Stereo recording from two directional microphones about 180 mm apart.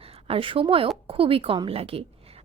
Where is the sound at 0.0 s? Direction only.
35° right (ahead or behind).